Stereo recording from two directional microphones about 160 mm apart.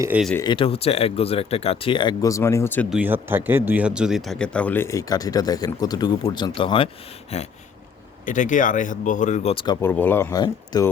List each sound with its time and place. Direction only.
0.4 s speech: 35° left (ahead or behind); by 2.8 s 15° left (ahead or behind)
2.9 s speech: 10° right (ahead or behind); by 7.4 s 40° left (ahead or behind)
8.2 s speech: 55° left (ahead or behind)
9.8 s speech: 10° left (ahead or behind)
10.3 s speech: 25° left (ahead or behind)